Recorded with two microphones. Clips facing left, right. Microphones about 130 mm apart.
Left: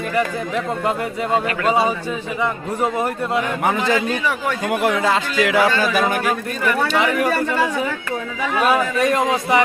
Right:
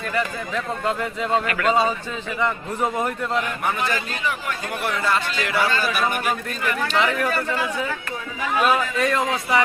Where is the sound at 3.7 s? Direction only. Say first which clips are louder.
Left 6 dB; 90° left.